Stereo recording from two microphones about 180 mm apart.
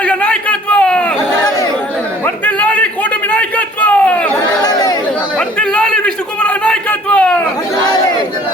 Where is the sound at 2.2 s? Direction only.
10° left (ahead or behind).